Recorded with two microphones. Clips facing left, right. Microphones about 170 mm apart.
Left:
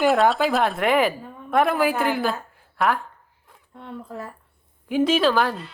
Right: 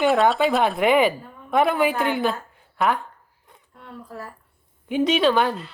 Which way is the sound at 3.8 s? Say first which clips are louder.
Left 3 dB; 20° left (ahead or behind).